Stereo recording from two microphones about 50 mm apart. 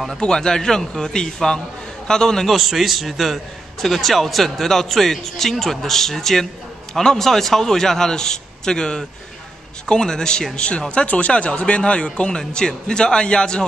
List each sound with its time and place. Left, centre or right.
0.2 s a man's voice: centre
2.5 s a man's voice: centre